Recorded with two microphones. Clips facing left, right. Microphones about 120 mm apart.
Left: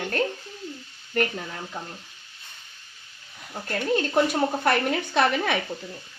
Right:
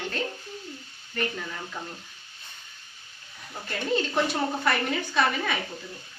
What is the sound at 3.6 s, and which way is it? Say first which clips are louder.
A woman's voice: left 3 dB; 55° left (ahead or behind).